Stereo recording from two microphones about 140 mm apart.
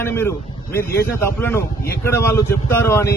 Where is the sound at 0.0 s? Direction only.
15° left (ahead or behind).